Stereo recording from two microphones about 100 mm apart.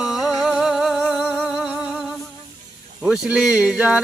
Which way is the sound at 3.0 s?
10° right (ahead or behind).